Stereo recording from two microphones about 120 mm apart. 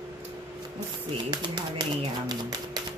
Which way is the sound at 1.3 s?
40° right (ahead or behind).